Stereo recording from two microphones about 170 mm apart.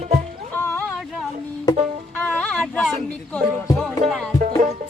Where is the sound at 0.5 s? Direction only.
15° left (ahead or behind).